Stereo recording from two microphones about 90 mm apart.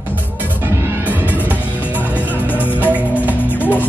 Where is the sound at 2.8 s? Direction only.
15° right (ahead or behind).